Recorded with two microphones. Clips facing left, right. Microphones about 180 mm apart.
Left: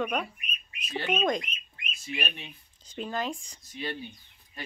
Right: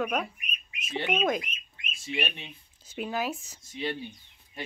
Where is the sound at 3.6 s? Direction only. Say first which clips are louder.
Right 5 dB; 25° right (ahead or behind).